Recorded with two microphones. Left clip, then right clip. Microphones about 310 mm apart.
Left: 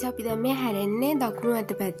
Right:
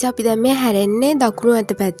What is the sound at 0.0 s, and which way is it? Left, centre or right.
A woman's voice, left.